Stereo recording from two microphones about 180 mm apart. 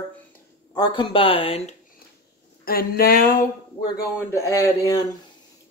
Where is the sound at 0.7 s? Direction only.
25° left (ahead or behind).